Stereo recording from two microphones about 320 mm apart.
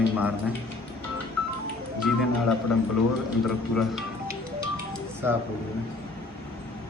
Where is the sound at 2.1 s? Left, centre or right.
Centre.